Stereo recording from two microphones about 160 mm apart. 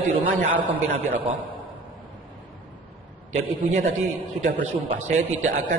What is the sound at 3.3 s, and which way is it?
Speech, 50° right (ahead or behind).